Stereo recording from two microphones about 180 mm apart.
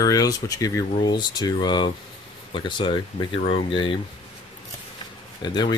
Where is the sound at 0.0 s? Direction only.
20° left (ahead or behind).